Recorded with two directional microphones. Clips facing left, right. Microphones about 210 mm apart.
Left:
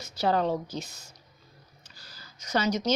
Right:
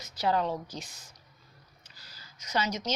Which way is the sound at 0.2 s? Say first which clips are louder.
Left 3 dB; 30° left (ahead or behind).